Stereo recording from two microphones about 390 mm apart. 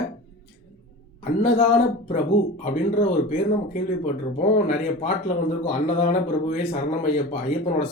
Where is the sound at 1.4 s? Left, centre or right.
Centre.